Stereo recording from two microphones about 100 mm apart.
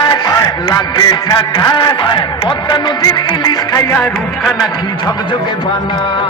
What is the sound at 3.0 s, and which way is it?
Music, 40° left (ahead or behind).